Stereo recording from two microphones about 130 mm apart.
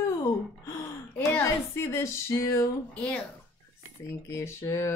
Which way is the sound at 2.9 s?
10° left (ahead or behind).